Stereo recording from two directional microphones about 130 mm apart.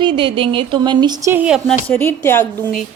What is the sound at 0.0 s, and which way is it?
Speech, 35° right (ahead or behind).